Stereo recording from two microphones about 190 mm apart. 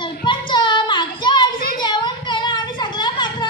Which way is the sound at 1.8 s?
25° left (ahead or behind).